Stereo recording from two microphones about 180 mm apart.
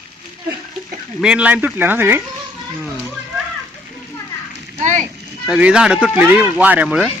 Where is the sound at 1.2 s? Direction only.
5° right (ahead or behind).